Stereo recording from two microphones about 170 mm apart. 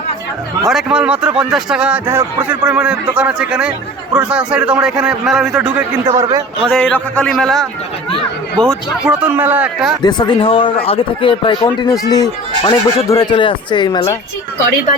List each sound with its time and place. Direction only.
0.7 s speech: 5° right (ahead or behind)
6.1 s a man's voice: 20° right (ahead or behind)
6.7 s speech: 5° left (ahead or behind)
9.2 s a man's voice: 10° right (ahead or behind)
10.0 s speech: 25° left (ahead or behind)